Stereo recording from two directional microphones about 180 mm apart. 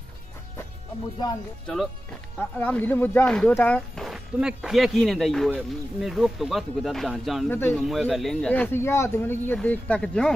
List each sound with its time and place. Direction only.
2.3 s speech: 10° left (ahead or behind)
7.4 s speech: 10° left (ahead or behind)
7.8 s speech: centre (ahead or behind)